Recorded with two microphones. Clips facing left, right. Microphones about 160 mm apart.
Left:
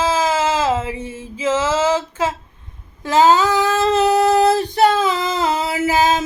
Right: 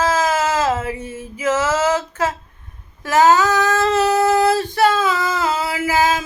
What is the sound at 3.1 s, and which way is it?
Female singing, 25° left (ahead or behind).